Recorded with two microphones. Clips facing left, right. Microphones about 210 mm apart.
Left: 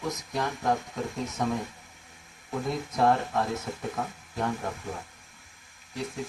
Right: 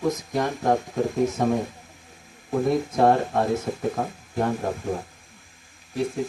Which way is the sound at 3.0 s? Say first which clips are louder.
Right 3 dB; 40° right (ahead or behind).